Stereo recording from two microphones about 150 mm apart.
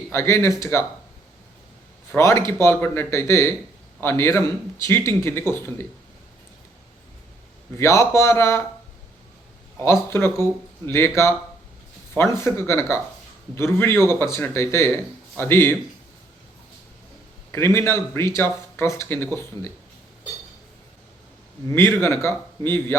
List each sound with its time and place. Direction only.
0.1 s speech: 15° left (ahead or behind)
2.1 s speech: 20° left (ahead or behind)
7.8 s speech: 20° left (ahead or behind)
9.7 s speech: 15° left (ahead or behind)
17.5 s speech: 20° left (ahead or behind)
21.7 s speech: 15° left (ahead or behind)